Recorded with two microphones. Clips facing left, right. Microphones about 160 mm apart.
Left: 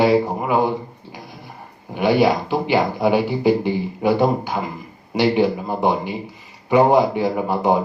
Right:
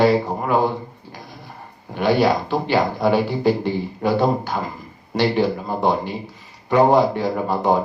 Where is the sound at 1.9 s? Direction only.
10° left (ahead or behind).